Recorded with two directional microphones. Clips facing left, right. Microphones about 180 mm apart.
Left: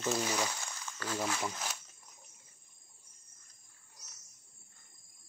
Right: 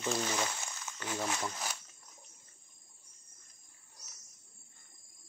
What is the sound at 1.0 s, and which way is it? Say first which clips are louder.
Speech: left 1 dB; 20° right (ahead or behind).